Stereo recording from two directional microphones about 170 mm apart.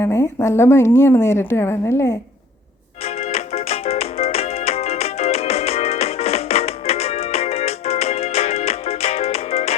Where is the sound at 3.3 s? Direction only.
35° left (ahead or behind).